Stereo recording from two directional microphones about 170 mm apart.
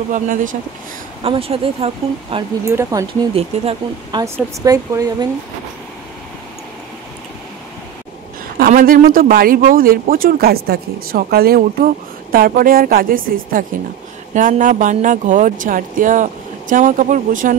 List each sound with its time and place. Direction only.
0.1 s speech: 50° right (ahead or behind)
1.2 s speech: 35° right (ahead or behind)
2.6 s speech: 15° right (ahead or behind)
3.3 s speech: 35° right (ahead or behind)
4.2 s speech: 20° right (ahead or behind)
8.5 s speech: 60° right (ahead or behind)